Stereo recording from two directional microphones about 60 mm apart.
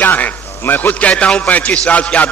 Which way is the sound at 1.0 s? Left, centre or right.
Left.